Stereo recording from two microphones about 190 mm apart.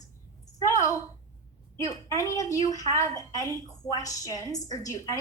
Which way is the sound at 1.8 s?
15° left (ahead or behind).